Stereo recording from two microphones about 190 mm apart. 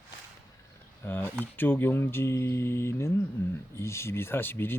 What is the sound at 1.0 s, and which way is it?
Speech, 10° left (ahead or behind).